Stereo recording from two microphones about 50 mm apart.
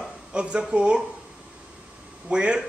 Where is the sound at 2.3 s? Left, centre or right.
Centre.